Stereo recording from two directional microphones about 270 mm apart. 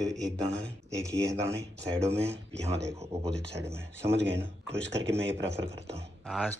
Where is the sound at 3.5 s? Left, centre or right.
Centre.